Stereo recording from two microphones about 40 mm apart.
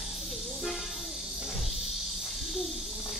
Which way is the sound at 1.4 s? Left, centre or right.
Centre.